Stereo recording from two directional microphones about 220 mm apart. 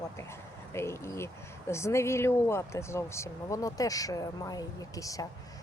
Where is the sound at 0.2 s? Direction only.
10° left (ahead or behind).